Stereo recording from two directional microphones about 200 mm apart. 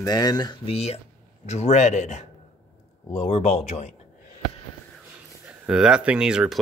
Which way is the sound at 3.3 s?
30° left (ahead or behind).